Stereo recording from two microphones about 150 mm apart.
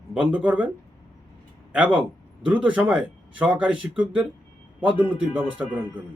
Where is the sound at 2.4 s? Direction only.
10° right (ahead or behind).